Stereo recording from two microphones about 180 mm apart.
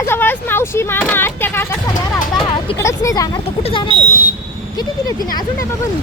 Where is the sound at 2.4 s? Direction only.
30° left (ahead or behind).